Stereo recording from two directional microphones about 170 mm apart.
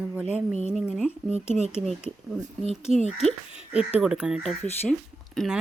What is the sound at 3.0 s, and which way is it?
Speech, 40° right (ahead or behind).